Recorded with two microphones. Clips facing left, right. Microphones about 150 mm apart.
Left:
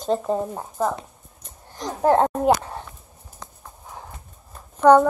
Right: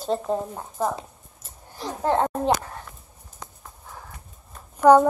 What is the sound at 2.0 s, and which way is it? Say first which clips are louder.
Speech: left 5 dB; 15° left (ahead or behind).